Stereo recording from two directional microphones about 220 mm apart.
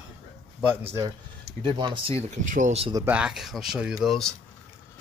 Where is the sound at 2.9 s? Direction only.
5° right (ahead or behind).